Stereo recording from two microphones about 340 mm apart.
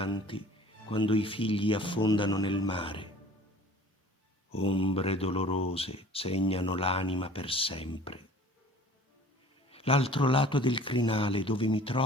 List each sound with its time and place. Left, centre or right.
0.0 s speech: centre
4.5 s speech: centre
9.6 s speech: centre